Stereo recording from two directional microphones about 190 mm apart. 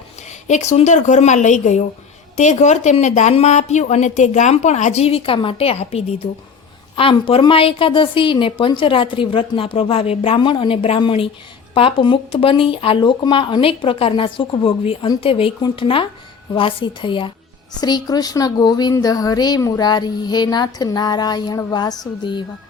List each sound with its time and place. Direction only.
0.4 s a woman's voice: 40° left (ahead or behind)